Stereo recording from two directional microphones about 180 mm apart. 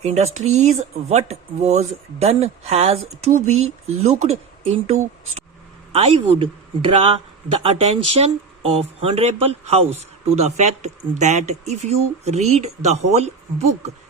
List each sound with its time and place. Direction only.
0.0 s speech: 40° right (ahead or behind)
7.6 s speech: 35° right (ahead or behind)